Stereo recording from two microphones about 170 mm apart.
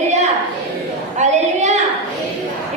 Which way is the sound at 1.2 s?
40° right (ahead or behind).